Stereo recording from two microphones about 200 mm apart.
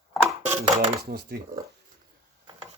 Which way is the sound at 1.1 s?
50° right (ahead or behind).